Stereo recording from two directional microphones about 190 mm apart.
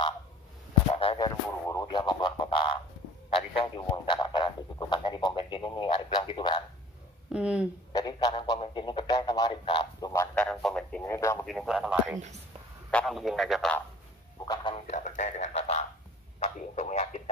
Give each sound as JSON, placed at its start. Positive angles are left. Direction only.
{"t": 0.9, "sound": "a sound", "side_deg": 25}
{"t": 3.3, "sound": "speech", "side_deg": 25}
{"t": 7.3, "sound": "speech", "side_deg": -5}
{"t": 7.9, "sound": "speech", "side_deg": 20}
{"t": 10.3, "sound": "speech", "side_deg": 5}
{"t": 11.4, "sound": "speech", "side_deg": 0}
{"t": 14.4, "sound": "speech", "side_deg": 25}
{"t": 14.9, "sound": "speech", "side_deg": 40}